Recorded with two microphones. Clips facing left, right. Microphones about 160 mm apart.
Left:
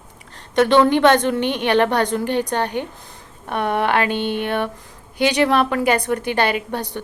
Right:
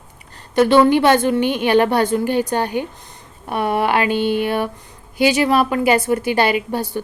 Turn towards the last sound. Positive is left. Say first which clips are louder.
# right 4 dB
turn(degrees=-5)  # may be behind; listen again after turning